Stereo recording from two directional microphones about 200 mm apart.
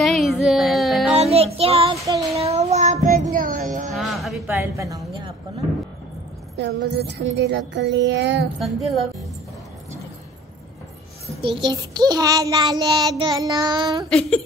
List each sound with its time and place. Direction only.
0.0 s music: centre (ahead or behind)
1.1 s child singing: 30° right (ahead or behind)
3.9 s music: centre (ahead or behind)
4.5 s speech: 15° right (ahead or behind)
6.5 s music: 60° right (ahead or behind)
8.5 s speech: centre (ahead or behind)
11.4 s a child's voice: 25° right (ahead or behind)
14.0 s speech: 5° left (ahead or behind)